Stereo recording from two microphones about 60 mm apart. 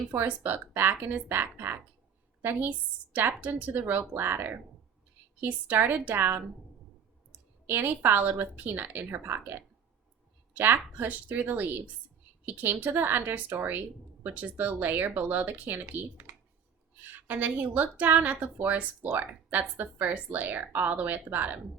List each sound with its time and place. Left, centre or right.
0.3 s speech: right
7.7 s a woman's voice: right